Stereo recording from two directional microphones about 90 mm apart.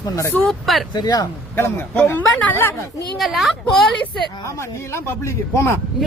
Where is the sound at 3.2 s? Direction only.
Centre (ahead or behind).